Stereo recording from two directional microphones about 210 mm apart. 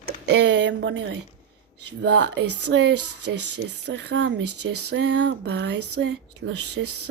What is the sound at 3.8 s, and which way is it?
Speech, 55° right (ahead or behind).